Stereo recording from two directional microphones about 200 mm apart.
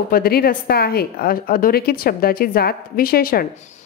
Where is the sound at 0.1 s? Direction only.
50° left (ahead or behind).